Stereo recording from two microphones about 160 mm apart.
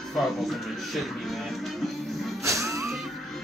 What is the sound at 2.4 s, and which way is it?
Music, 20° right (ahead or behind).